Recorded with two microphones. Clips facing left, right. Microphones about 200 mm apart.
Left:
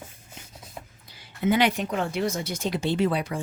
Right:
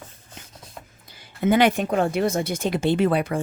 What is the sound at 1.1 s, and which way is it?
Speech, 50° right (ahead or behind).